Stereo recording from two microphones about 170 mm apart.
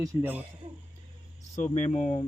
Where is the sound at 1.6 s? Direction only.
45° left (ahead or behind).